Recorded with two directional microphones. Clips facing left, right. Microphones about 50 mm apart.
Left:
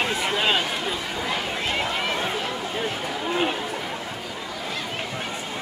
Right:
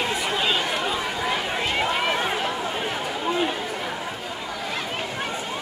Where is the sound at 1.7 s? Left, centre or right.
Centre.